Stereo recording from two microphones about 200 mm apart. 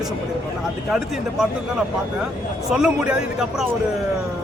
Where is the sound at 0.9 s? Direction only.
Centre (ahead or behind).